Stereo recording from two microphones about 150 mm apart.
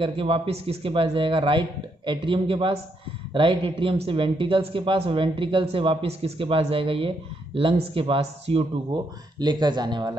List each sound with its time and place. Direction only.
0.0 s speech: 35° right (ahead or behind)
8.9 s speech: 30° right (ahead or behind)